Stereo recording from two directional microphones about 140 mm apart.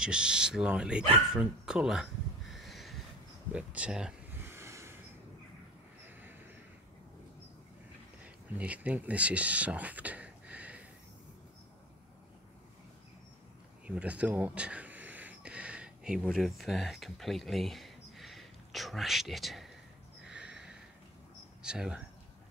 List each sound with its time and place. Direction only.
0.0 s speech: 5° right (ahead or behind)
4.3 s a sound: 15° right (ahead or behind)
8.5 s speech: 10° right (ahead or behind)
13.8 s speech: 10° right (ahead or behind)
20.2 s snort: 5° right (ahead or behind)
21.6 s speech: 5° right (ahead or behind)